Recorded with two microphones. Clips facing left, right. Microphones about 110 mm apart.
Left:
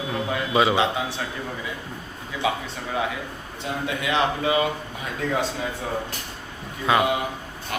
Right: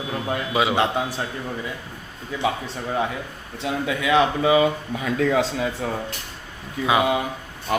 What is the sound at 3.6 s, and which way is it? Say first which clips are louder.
Speech: right 4 dB; 90° right.